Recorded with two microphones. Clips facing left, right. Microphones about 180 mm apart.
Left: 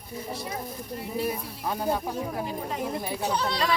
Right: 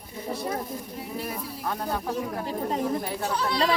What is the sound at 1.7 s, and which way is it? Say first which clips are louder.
Speech: left 4 dB; 10° left (ahead or behind).